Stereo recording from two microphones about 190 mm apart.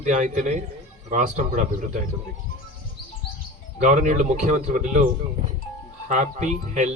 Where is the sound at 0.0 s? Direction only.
40° right (ahead or behind).